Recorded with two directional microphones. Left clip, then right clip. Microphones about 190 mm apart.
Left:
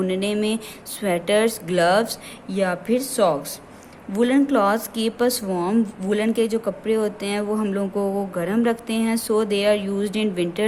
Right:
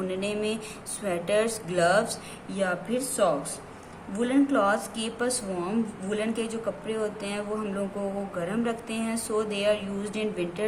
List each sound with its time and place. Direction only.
0.1 s a woman's voice: 40° left (ahead or behind)